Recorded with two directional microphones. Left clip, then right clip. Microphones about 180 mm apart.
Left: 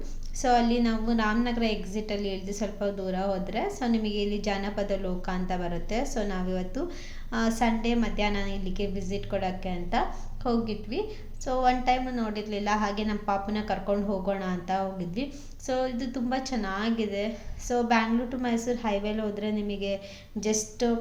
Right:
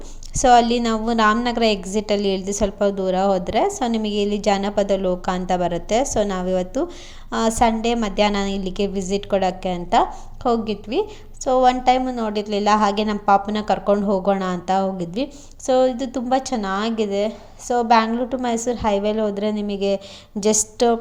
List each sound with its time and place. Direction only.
0.3 s a woman's voice: 45° right (ahead or behind)